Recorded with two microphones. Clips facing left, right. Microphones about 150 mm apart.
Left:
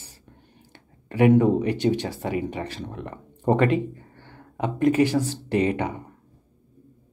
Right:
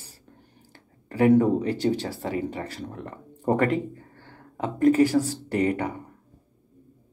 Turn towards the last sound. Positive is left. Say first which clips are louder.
# left 1 dB
turn(degrees=20)  # may be behind; listen again after turning